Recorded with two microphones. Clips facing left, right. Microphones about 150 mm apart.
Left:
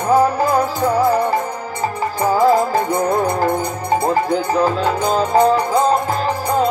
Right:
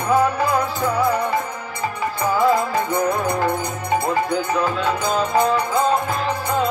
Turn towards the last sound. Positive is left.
turn(degrees=35)  # may be behind; listen again after turning